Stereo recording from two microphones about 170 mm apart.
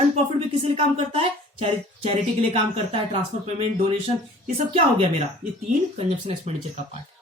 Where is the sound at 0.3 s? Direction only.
35° right (ahead or behind).